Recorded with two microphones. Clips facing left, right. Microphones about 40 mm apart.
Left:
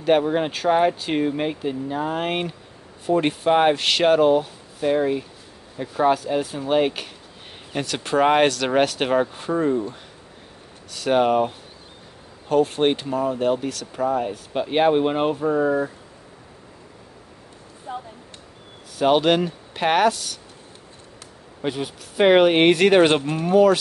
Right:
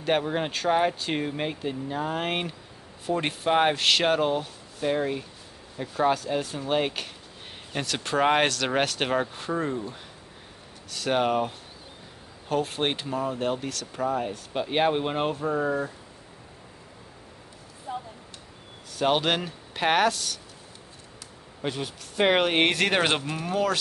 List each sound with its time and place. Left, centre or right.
0.0 s speech: centre
17.9 s a sound: left
18.9 s speech: centre
21.5 s speech: centre